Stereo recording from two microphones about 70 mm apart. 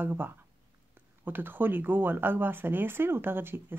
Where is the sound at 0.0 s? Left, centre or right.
Right.